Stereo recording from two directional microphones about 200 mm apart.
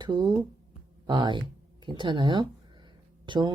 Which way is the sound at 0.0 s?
20° right (ahead or behind).